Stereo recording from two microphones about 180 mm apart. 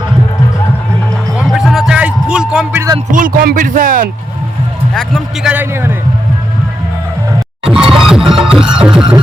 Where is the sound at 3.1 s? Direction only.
50° right (ahead or behind).